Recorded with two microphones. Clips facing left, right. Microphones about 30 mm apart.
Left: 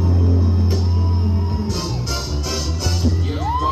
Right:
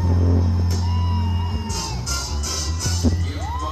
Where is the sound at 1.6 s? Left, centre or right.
Left.